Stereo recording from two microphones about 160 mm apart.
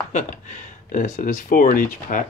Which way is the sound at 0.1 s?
50° left (ahead or behind).